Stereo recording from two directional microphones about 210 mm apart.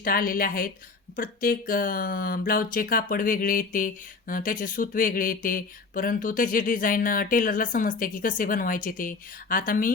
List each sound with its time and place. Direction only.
0.0 s a woman's voice: 45° left (ahead or behind)